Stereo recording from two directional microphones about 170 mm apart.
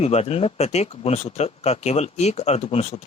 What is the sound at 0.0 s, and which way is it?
A man's voice, 40° left (ahead or behind).